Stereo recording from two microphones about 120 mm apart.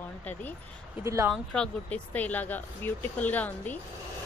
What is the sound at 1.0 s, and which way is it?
Speech, 25° right (ahead or behind).